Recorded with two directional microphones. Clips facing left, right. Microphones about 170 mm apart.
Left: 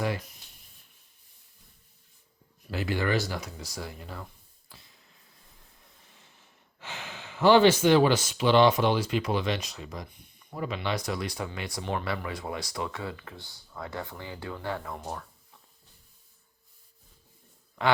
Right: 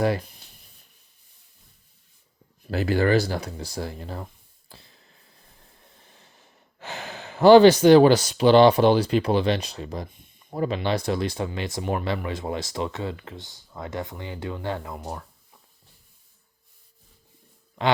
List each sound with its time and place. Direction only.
0.0 s speech: 40° right (ahead or behind)
2.6 s speech: 40° right (ahead or behind)
6.7 s speech: 40° right (ahead or behind); by 15.2 s 15° right (ahead or behind)